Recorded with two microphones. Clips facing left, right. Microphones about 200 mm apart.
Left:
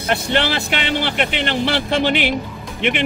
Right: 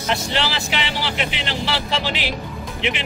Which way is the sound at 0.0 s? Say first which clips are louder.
Left 4 dB; 55° left (ahead or behind).